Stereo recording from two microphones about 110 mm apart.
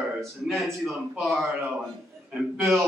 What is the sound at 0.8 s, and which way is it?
Speech, centre (ahead or behind).